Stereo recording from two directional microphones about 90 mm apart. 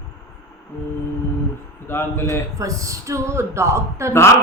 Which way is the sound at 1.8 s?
25° left (ahead or behind).